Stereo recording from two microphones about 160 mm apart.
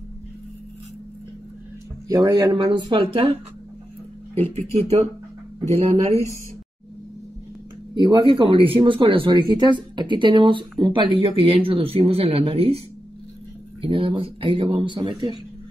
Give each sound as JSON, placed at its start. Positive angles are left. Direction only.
{"t": 2.0, "sound": "speech", "side_deg": -25}
{"t": 4.7, "sound": "speech", "side_deg": -40}
{"t": 7.9, "sound": "speech", "side_deg": -25}
{"t": 13.8, "sound": "speech", "side_deg": -35}